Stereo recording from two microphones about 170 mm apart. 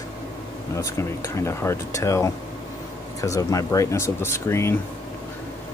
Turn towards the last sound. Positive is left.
turn(degrees=15)  # may be behind; listen again after turning